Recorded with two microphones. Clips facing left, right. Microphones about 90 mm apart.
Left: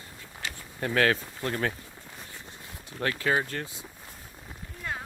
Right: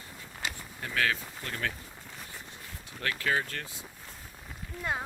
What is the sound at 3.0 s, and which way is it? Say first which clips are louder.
Speech: left 3 dB; 25° left (ahead or behind).